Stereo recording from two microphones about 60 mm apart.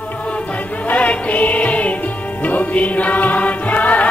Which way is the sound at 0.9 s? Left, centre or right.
Left.